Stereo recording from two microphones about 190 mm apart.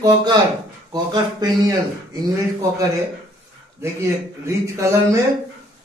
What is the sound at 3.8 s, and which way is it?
A man's voice, 15° right (ahead or behind).